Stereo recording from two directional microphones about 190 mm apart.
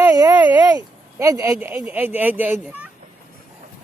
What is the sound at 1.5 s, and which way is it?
Speech, 5° right (ahead or behind).